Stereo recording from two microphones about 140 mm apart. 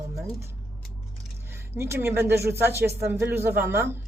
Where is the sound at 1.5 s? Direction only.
15° right (ahead or behind).